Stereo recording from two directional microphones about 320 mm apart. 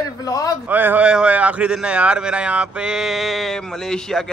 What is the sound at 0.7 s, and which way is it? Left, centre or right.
A man's voice, centre.